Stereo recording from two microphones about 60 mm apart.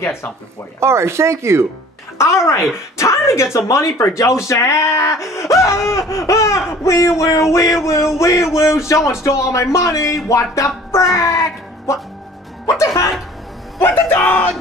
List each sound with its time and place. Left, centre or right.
0.7 s speech: right
2.2 s speech: left
11.1 s music: left
13.7 s music: left